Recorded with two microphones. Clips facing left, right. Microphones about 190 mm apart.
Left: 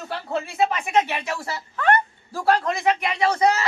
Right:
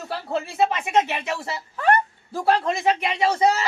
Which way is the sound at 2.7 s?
25° right (ahead or behind).